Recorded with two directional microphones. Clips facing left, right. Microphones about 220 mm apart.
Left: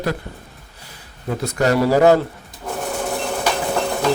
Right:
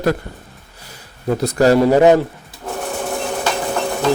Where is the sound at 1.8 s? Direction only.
20° right (ahead or behind).